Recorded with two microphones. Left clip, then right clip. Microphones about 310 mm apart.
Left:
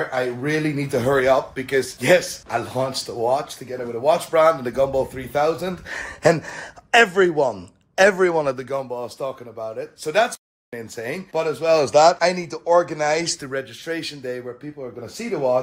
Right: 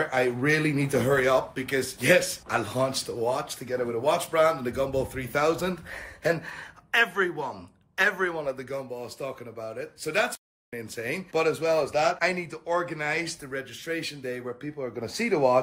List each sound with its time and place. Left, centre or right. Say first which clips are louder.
0.1 s speech: left 1 dB; centre
5.9 s speech: left 12 dB; left
6.5 s speech: left 9 dB; centre
11.8 s speech: left 10 dB; left
12.2 s speech: left 7 dB; centre